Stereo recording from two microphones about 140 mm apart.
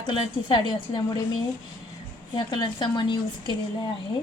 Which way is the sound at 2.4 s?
35° left (ahead or behind).